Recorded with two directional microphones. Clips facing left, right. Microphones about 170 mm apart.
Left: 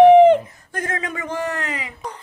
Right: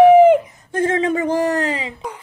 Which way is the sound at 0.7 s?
25° right (ahead or behind).